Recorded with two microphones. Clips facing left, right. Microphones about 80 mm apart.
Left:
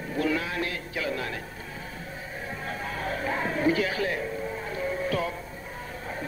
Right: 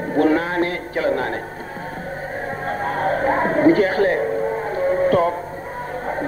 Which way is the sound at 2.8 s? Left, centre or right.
Right.